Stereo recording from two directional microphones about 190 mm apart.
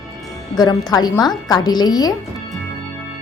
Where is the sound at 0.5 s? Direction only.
20° left (ahead or behind).